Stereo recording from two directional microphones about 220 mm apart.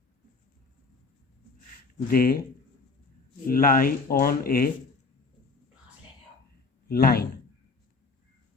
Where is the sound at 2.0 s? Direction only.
40° left (ahead or behind).